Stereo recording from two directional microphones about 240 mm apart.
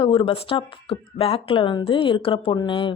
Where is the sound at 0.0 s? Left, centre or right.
Left.